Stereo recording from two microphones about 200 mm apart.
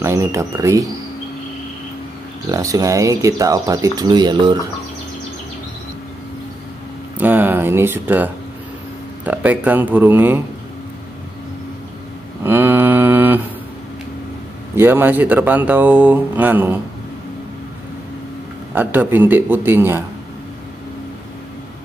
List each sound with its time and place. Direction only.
0.0 s speech: 15° right (ahead or behind)
2.5 s speech: 15° right (ahead or behind)
7.2 s speech: 10° right (ahead or behind)
12.4 s mantra: 10° right (ahead or behind)
14.8 s speech: 10° right (ahead or behind)
18.8 s speech: 10° right (ahead or behind)